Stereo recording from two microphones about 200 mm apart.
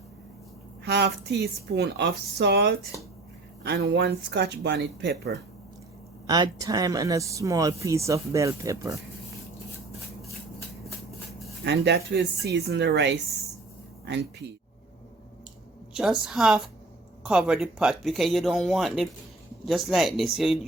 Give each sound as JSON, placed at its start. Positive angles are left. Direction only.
{"t": 0.9, "sound": "speech", "side_deg": -60}
{"t": 6.2, "sound": "speech", "side_deg": -20}
{"t": 11.6, "sound": "speech", "side_deg": -55}
{"t": 16.0, "sound": "speech", "side_deg": 0}